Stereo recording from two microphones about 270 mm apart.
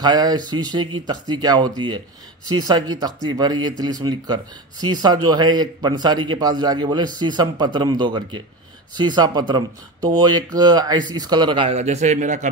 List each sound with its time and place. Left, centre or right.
0.0 s a man's voice: centre